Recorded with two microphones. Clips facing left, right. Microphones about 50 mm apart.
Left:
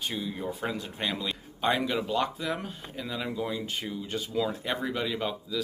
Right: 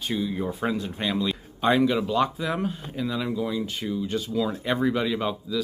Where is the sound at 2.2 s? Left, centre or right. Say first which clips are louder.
Right 5 dB; centre.